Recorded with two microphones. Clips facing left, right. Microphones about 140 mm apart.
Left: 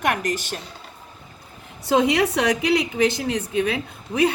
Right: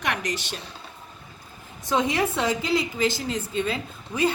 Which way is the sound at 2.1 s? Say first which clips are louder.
Left 4 dB; 75° left (ahead or behind).